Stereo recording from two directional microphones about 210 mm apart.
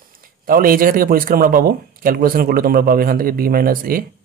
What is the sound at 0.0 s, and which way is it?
A man's voice, 45° right (ahead or behind).